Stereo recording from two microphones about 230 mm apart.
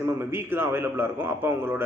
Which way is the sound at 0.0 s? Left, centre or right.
Centre.